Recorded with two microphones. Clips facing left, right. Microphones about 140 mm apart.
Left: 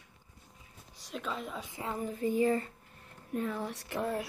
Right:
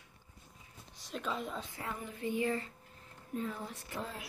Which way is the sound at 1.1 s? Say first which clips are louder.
Even; centre (ahead or behind).